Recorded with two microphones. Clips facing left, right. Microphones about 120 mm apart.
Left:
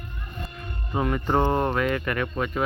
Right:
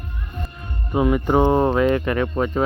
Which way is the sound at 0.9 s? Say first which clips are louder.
Right 6 dB; 10° right (ahead or behind).